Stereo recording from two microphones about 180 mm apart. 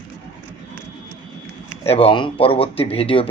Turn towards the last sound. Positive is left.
turn(degrees=30)  # may be behind; listen again after turning